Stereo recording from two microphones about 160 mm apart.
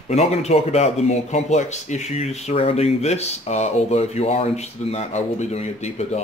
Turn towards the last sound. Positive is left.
turn(degrees=45)  # may be behind; listen again after turning